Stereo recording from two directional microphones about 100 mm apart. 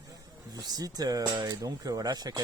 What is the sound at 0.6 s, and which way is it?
Speech, 40° right (ahead or behind).